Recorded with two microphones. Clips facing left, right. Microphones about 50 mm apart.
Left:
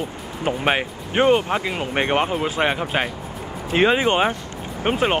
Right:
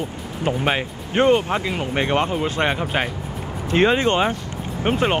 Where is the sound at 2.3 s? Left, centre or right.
Centre.